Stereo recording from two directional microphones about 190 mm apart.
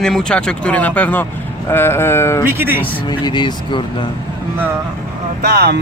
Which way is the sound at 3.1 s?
25° left (ahead or behind).